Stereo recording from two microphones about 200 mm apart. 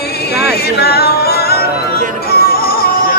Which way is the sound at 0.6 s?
50° left (ahead or behind).